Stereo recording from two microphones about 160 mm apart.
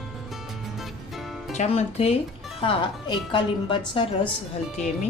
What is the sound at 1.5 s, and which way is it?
A woman's voice, 45° left (ahead or behind).